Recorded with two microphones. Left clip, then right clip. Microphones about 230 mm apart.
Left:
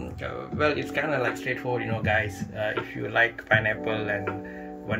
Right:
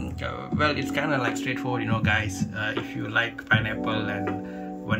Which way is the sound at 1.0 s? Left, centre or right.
Right.